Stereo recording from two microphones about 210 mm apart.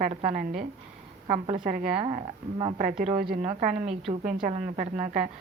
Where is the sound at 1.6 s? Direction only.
40° right (ahead or behind).